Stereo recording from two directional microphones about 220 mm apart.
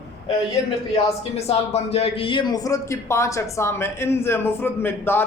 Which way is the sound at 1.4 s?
30° left (ahead or behind).